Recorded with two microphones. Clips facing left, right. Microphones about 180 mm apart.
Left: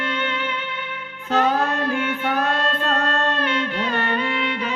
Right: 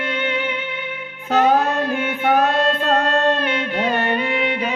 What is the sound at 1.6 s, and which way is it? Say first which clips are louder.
Child singing: right 2 dB; 20° right (ahead or behind).